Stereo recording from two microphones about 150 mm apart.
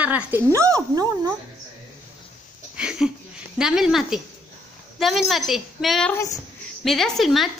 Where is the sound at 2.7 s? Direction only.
5° right (ahead or behind).